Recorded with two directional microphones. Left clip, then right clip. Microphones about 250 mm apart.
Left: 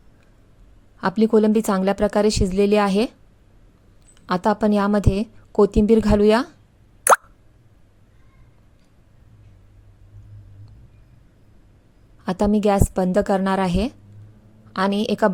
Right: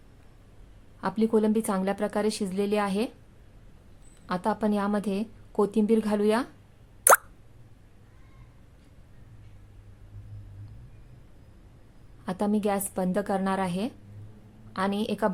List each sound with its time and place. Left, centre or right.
1.0 s a woman's voice: left
4.3 s a woman's voice: left
12.2 s a woman's voice: left